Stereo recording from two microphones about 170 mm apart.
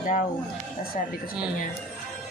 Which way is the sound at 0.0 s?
50° left (ahead or behind).